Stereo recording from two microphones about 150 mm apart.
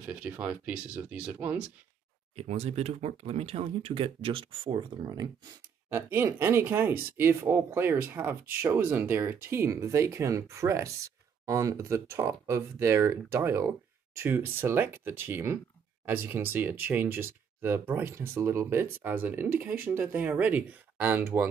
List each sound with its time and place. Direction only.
0.0 s speech: 10° right (ahead or behind)
2.3 s speech: 45° right (ahead or behind); by 21.2 s 10° right (ahead or behind)